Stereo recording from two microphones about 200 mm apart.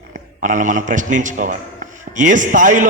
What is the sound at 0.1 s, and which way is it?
A man's voice, 40° right (ahead or behind).